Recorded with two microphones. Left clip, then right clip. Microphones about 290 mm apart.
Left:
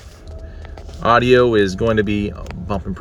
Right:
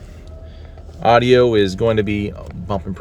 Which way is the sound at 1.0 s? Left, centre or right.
Right.